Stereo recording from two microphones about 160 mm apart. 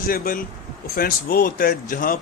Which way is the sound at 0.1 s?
65° left (ahead or behind).